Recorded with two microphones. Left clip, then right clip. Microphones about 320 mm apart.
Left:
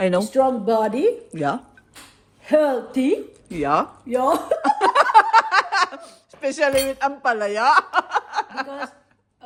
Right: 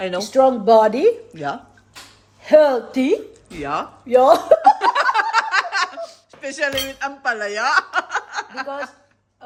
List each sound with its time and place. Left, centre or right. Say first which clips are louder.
0.3 s speech: right 5 dB; centre
1.3 s a woman's voice: left 3 dB; left
2.4 s speech: right 5 dB; right
3.5 s speech: left 4 dB; centre
4.0 s speech: right 7 dB; centre
4.6 s laughter: right 2 dB; centre
5.1 s a sound: left 4 dB; centre